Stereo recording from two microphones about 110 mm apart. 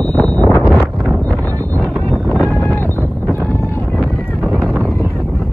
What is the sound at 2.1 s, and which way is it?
Wind noise, centre (ahead or behind).